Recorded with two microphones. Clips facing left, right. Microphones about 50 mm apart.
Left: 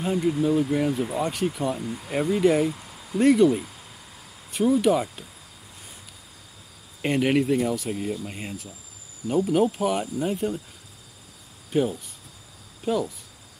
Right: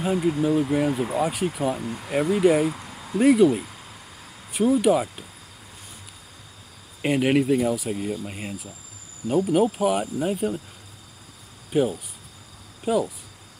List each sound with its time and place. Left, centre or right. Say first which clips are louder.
0.0 s speech: right 1 dB; centre
1.8 s speech: right 1 dB; right
2.0 s speech: right 2 dB; centre
7.0 s speech: right 1 dB; centre
11.7 s speech: right 2 dB; centre